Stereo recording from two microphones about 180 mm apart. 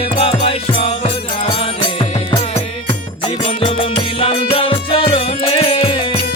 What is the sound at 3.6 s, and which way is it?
Music, 30° left (ahead or behind).